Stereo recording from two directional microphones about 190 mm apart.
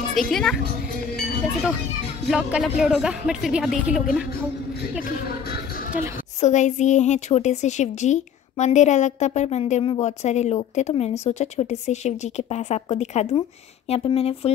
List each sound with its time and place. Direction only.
0.3 s speech: 5° left (ahead or behind)
2.2 s speech: centre (ahead or behind)
6.4 s a woman's voice: 40° left (ahead or behind)